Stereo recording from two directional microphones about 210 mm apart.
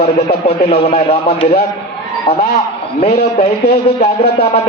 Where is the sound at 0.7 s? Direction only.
30° left (ahead or behind).